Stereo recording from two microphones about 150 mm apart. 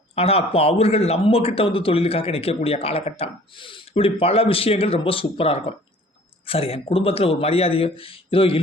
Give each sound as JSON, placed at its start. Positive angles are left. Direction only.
{"t": 0.2, "sound": "speech", "side_deg": 40}